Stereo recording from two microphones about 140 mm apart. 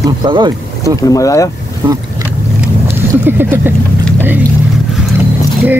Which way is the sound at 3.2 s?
15° right (ahead or behind).